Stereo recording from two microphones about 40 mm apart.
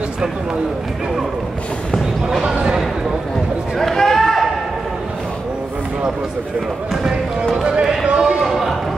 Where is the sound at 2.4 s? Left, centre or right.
Centre.